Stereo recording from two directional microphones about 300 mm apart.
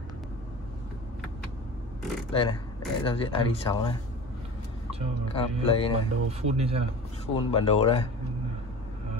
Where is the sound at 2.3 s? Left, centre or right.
Centre.